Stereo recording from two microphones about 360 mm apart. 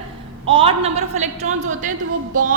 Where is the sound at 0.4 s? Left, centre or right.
Centre.